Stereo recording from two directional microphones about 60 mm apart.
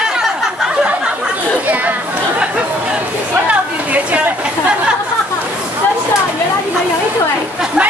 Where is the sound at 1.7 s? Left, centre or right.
Right.